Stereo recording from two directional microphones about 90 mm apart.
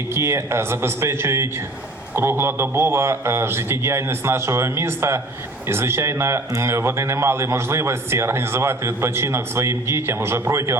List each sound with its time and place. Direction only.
0.1 s speech: 30° right (ahead or behind)